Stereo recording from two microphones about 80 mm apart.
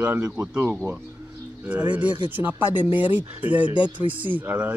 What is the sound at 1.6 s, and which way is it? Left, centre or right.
Speech, right.